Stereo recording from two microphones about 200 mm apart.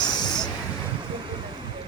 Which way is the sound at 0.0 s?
20° left (ahead or behind).